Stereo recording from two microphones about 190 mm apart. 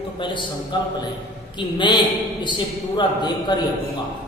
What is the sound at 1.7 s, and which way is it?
A man's voice, 25° left (ahead or behind).